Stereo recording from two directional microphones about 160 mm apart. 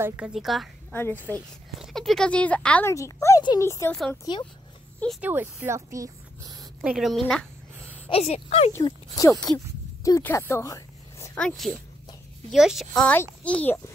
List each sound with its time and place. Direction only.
0.0 s a woman's voice: 5° right (ahead or behind)
0.9 s a child's voice: 15° left (ahead or behind)
1.8 s a child's voice: centre (ahead or behind)
2.9 s speech: 20° left (ahead or behind)
3.9 s a woman's voice: 5° left (ahead or behind)
4.2 s speech: 25° left (ahead or behind)
5.2 s speech: 10° right (ahead or behind)
6.8 s a woman's voice: 5° right (ahead or behind)
8.1 s speech: 40° left (ahead or behind)
8.8 s speech: 20° left (ahead or behind)
11.3 s a woman's voice: 5° left (ahead or behind)